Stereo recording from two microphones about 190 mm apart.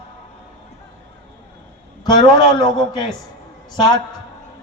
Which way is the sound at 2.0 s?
20° left (ahead or behind).